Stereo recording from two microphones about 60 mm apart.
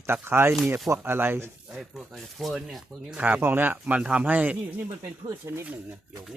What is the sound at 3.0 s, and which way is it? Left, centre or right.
Speech, right.